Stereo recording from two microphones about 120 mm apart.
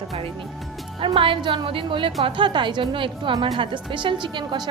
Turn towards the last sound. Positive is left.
turn(degrees=-40)  # may be behind; listen again after turning